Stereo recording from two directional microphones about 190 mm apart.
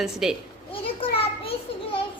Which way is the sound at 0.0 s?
Centre (ahead or behind).